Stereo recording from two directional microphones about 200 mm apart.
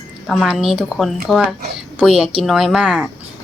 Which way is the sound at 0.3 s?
Centre (ahead or behind).